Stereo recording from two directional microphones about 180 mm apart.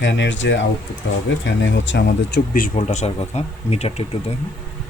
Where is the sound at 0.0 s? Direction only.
85° left.